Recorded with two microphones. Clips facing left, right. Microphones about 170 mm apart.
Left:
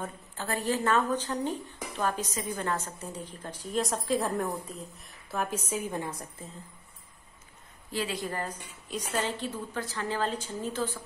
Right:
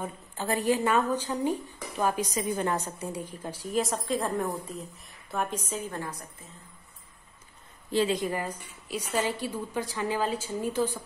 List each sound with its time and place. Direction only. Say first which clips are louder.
0.0 s speech: right 3 dB; 15° right (ahead or behind); by 5.6 s centre (ahead or behind)
5.7 s a woman's voice: left 2 dB; 15° left (ahead or behind)
7.9 s speech: right 7 dB; 25° right (ahead or behind)
8.3 s speech: right 3 dB; 10° right (ahead or behind)